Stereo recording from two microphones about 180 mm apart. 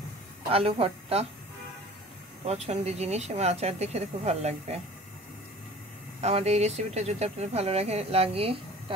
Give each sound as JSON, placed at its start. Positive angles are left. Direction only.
{"t": 0.5, "sound": "speech", "side_deg": -30}
{"t": 2.4, "sound": "speech", "side_deg": -35}
{"t": 6.2, "sound": "speech", "side_deg": -35}